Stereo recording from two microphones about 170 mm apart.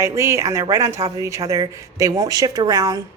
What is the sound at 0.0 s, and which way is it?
A woman's voice, 15° right (ahead or behind).